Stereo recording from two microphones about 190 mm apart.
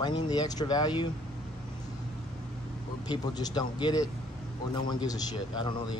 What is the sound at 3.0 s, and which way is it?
Speech, 20° left (ahead or behind).